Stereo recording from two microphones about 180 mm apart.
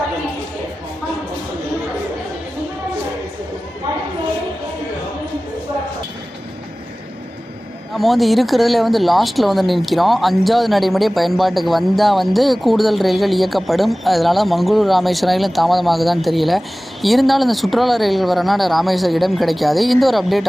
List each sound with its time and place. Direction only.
7.9 s speech: centre (ahead or behind)